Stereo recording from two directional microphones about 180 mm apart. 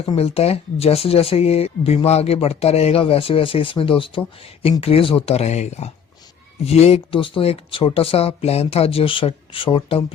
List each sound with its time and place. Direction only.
0.0 s speech: 35° left (ahead or behind)